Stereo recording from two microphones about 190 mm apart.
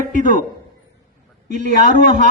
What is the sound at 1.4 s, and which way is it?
Speech, 40° right (ahead or behind).